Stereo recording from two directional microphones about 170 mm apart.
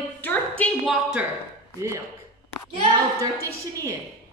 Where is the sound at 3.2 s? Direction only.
20° right (ahead or behind).